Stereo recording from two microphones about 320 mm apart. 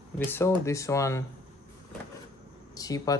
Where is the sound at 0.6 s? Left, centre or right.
Centre.